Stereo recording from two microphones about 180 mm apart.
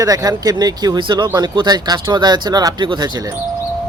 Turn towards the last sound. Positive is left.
turn(degrees=-25)  # may be behind; listen again after turning